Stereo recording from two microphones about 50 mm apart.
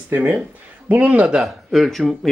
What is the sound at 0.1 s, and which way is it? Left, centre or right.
Speech, right.